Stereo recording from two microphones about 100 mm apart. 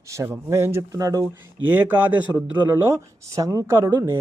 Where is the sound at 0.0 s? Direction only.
30° right (ahead or behind).